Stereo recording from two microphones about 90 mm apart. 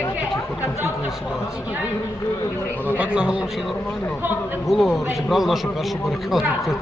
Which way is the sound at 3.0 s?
10° right (ahead or behind).